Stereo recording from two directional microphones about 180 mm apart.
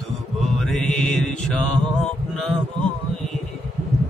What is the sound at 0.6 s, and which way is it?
Music, 5° left (ahead or behind).